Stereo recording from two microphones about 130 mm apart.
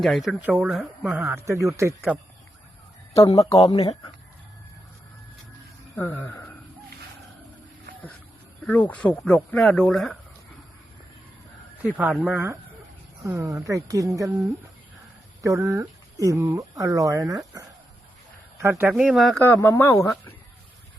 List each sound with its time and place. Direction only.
0.0 s speech: centre (ahead or behind)
0.4 s speech: 10° right (ahead or behind)
0.7 s speech: centre (ahead or behind)
1.3 s speech: 20° right (ahead or behind)
3.2 s speech: 25° left (ahead or behind)
3.5 s speech: 45° left (ahead or behind)
6.0 s speech: 15° left (ahead or behind)
8.6 s speech: 10° left (ahead or behind)
12.2 s speech: 15° right (ahead or behind)
13.2 s speech: 25° right (ahead or behind)
18.9 s speech: 5° right (ahead or behind)
19.4 s speech: 15° left (ahead or behind)